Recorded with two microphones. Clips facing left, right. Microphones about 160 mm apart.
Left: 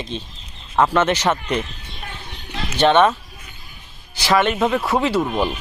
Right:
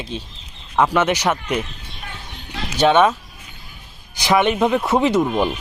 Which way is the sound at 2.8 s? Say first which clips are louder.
Even; 10° right (ahead or behind).